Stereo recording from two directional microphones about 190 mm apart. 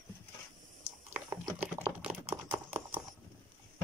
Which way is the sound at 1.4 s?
10° right (ahead or behind).